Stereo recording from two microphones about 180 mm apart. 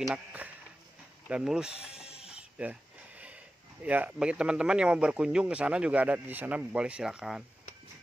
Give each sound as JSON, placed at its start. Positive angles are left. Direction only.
{"t": 0.0, "sound": "speech", "side_deg": -5}
{"t": 2.2, "sound": "a sound", "side_deg": -5}
{"t": 3.8, "sound": "speech", "side_deg": -5}